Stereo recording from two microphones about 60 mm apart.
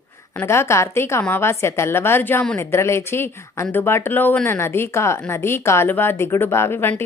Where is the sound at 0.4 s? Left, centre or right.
Left.